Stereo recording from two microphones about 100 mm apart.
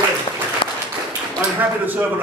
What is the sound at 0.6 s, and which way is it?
Applause, 55° left (ahead or behind).